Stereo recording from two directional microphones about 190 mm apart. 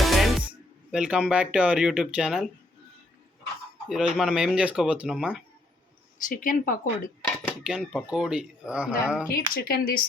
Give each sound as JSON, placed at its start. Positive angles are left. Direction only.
{"t": 0.0, "sound": "music", "side_deg": 0}
{"t": 0.9, "sound": "speech", "side_deg": -5}
{"t": 3.8, "sound": "speech", "side_deg": 0}
{"t": 6.2, "sound": "speech", "side_deg": 45}
{"t": 7.6, "sound": "speech", "side_deg": 0}
{"t": 9.3, "sound": "speech", "side_deg": 50}